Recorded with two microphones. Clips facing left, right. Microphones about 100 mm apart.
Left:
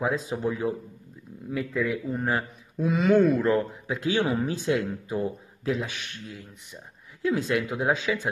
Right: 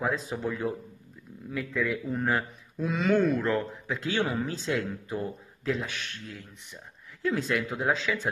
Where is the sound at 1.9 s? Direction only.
5° left (ahead or behind).